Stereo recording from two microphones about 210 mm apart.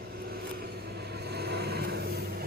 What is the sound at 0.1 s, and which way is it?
Vehicle, 45° right (ahead or behind).